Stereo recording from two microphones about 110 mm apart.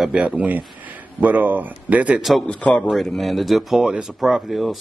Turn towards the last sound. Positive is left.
turn(degrees=0)  # may be behind; listen again after turning